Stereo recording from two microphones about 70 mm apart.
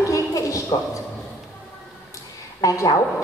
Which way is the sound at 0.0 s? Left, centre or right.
Left.